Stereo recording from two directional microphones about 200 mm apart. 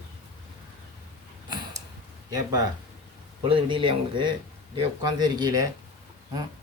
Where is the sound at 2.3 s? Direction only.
20° right (ahead or behind).